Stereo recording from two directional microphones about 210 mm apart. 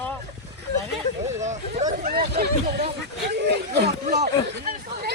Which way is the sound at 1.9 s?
45° right (ahead or behind).